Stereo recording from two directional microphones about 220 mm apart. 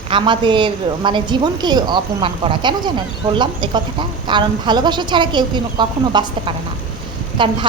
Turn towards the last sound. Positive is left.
turn(degrees=-20)  # may be behind; listen again after turning